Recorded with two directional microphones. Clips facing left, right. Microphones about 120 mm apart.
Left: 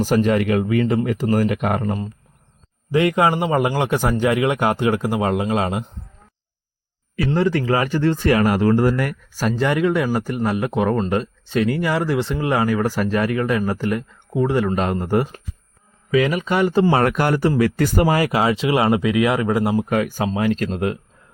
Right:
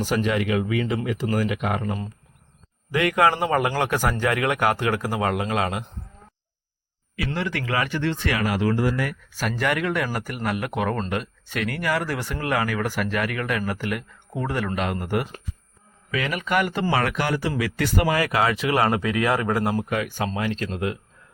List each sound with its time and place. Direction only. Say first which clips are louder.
0.0 s speech: left 6 dB; 40° left (ahead or behind)
2.9 s speech: left 3 dB; 25° left (ahead or behind)
7.3 s speech: left 9 dB; 35° left (ahead or behind)
9.3 s speech: left 5 dB; 35° left (ahead or behind); by 19.8 s 15° left (ahead or behind)
19.9 s speech: left 5 dB; 45° left (ahead or behind)
20.7 s speech: left 5 dB; 35° left (ahead or behind)